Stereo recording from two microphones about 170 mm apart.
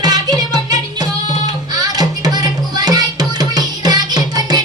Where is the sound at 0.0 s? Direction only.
25° right (ahead or behind).